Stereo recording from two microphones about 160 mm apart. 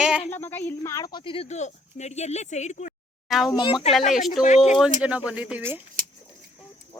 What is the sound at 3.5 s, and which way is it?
Speech, 30° left (ahead or behind).